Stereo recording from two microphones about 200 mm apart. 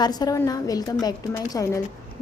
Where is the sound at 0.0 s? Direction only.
20° left (ahead or behind).